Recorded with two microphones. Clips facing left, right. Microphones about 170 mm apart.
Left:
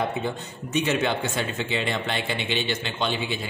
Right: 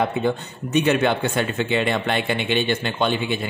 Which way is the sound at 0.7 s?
60° right (ahead or behind).